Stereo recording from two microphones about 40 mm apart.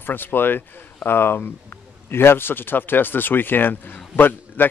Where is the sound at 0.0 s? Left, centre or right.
Left.